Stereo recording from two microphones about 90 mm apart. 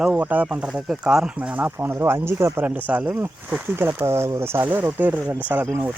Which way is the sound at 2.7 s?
15° right (ahead or behind).